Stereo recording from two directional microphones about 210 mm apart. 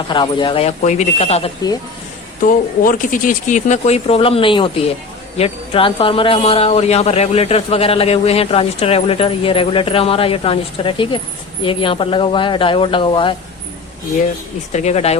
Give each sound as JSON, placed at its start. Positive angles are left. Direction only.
{"t": 0.1, "sound": "speech", "side_deg": 20}
{"t": 2.5, "sound": "speech", "side_deg": 40}
{"t": 14.7, "sound": "speech", "side_deg": 30}